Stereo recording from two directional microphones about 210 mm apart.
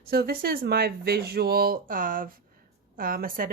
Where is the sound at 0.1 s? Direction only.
45° right (ahead or behind).